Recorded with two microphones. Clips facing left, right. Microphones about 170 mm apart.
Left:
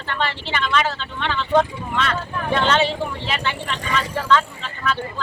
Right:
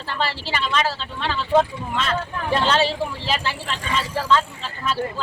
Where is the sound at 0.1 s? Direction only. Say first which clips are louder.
Left 1 dB; 35° right (ahead or behind).